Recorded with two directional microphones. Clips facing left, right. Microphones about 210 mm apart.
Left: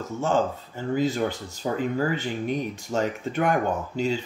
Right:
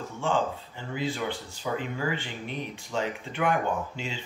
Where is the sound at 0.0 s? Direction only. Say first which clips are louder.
Left 4 dB; 40° left (ahead or behind).